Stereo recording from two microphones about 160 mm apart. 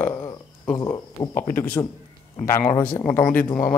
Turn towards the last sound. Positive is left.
turn(degrees=15)  # may be behind; listen again after turning